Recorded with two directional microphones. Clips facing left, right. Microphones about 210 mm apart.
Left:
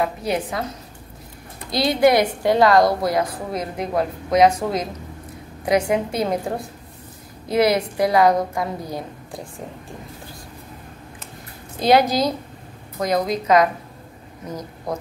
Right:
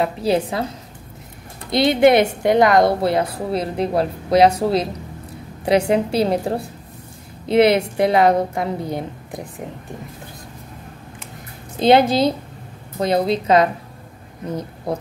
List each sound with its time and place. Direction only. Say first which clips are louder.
0.0 s a woman's voice: right 4 dB; 30° right (ahead or behind)
1.7 s a woman's voice: right 3 dB; 20° right (ahead or behind)
5.7 s a woman's voice: right 3 dB; 30° right (ahead or behind)
11.8 s a woman's voice: right 3 dB; 25° right (ahead or behind)
14.9 s a woman's voice: right 3 dB; 30° right (ahead or behind)